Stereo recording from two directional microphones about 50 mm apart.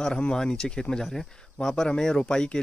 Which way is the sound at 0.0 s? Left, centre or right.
Centre.